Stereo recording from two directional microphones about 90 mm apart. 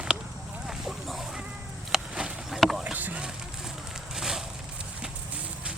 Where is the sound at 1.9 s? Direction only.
10° right (ahead or behind).